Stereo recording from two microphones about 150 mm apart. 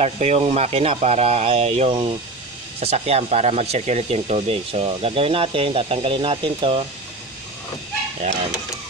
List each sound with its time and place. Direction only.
0.0 s speech: 45° right (ahead or behind)